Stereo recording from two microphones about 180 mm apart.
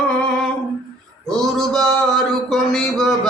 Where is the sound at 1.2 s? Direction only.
Centre (ahead or behind).